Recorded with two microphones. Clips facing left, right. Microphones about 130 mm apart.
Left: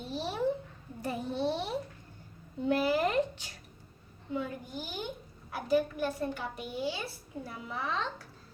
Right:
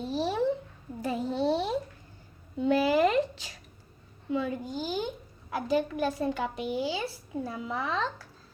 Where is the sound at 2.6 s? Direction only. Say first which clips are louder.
Right 4 dB; 90° right.